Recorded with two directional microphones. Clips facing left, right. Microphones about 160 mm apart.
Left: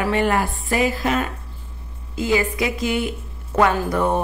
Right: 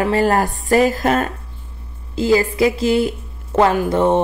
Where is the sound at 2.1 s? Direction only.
35° right (ahead or behind).